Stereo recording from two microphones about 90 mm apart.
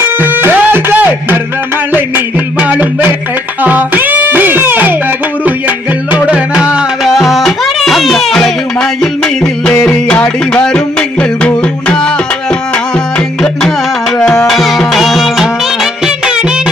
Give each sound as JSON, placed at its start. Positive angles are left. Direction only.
{"t": 0.2, "sound": "music", "side_deg": -25}